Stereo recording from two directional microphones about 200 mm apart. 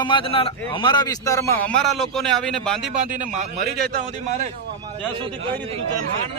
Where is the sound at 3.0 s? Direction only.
40° right (ahead or behind).